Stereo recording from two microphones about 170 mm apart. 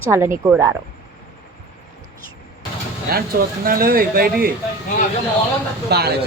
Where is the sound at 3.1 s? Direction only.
65° right (ahead or behind).